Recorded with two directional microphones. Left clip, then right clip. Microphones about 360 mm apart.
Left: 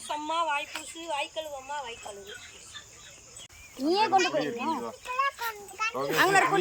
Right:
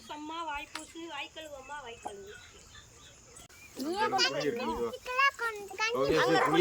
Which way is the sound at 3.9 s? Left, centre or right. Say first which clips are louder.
Left 7 dB; left.